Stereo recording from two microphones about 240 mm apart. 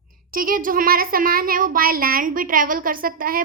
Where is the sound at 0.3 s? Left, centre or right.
Right.